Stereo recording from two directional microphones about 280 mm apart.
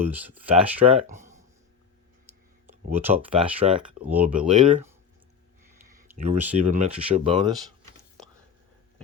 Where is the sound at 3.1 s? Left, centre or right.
Centre.